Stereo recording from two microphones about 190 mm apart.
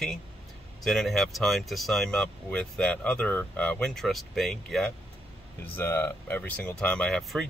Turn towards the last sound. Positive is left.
turn(degrees=0)  # may be behind; listen again after turning